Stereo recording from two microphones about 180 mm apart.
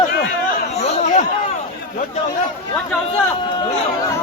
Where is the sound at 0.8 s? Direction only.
35° left (ahead or behind).